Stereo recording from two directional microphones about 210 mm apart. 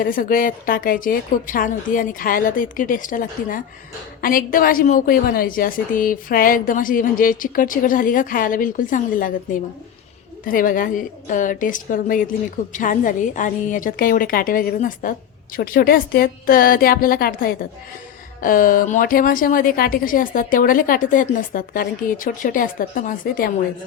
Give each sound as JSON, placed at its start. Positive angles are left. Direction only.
{"t": 0.0, "sound": "a woman's voice", "side_deg": 40}